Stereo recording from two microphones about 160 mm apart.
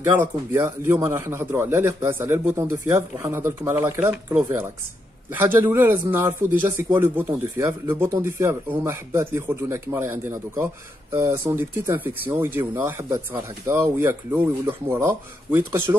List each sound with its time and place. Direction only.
0.0 s a man's voice: 15° right (ahead or behind)